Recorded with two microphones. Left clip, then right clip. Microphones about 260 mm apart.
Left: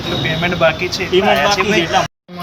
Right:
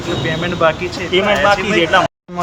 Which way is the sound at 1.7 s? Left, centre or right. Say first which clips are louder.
Right 2 dB; centre.